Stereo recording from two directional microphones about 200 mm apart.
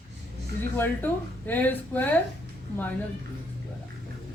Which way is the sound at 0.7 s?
10° left (ahead or behind).